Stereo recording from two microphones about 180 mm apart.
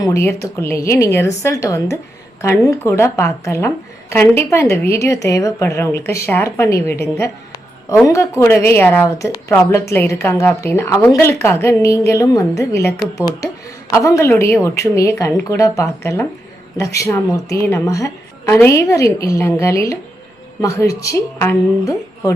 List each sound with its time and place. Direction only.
0.0 s a woman's voice: 15° left (ahead or behind)